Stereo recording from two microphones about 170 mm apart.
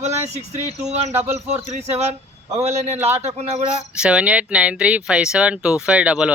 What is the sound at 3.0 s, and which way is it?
Speech, 15° right (ahead or behind).